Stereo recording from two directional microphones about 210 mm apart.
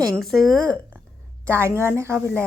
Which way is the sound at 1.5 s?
10° right (ahead or behind).